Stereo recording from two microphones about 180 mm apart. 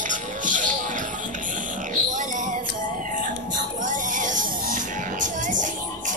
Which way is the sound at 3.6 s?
45° right (ahead or behind).